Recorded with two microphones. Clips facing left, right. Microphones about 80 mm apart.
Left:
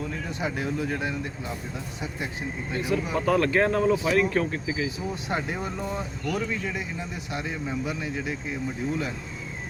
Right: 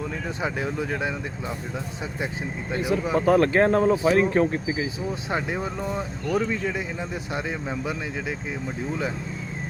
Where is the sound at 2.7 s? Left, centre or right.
Right.